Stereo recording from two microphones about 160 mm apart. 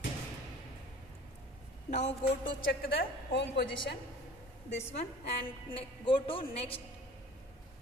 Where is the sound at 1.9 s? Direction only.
45° left (ahead or behind).